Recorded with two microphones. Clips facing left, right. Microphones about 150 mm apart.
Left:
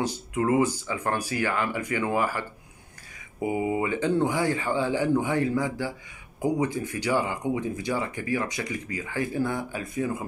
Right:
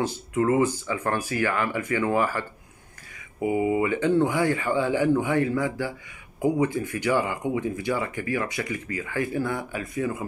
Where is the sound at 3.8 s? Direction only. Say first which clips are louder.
Right 3 dB; 25° left (ahead or behind).